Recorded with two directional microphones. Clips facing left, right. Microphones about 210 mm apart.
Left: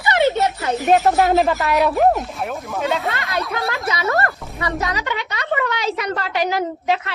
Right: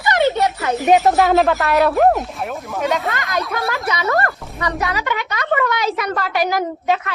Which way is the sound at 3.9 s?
25° left (ahead or behind).